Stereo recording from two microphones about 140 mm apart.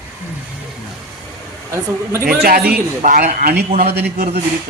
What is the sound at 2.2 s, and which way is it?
A man's voice, 90° right.